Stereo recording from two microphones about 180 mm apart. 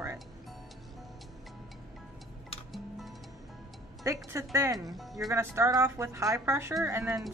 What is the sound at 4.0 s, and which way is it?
Speech, 15° right (ahead or behind).